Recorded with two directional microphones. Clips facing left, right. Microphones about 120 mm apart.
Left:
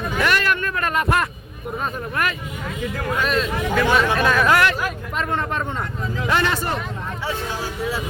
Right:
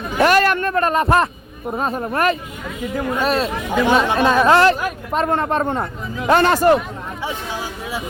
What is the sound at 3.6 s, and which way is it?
Speech, 15° right (ahead or behind).